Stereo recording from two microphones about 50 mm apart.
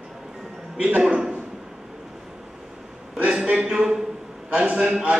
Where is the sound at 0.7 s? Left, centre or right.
Right.